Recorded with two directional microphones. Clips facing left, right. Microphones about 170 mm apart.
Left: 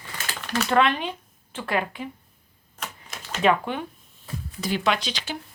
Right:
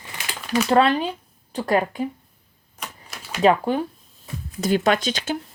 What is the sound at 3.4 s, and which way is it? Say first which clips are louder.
Speech: right 4 dB; 35° right (ahead or behind).